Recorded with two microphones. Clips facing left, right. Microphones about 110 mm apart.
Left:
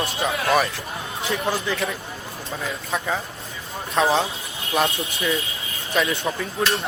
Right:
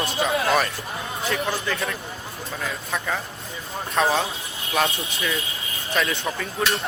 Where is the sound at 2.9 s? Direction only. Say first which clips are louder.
Left 2 dB; 15° left (ahead or behind).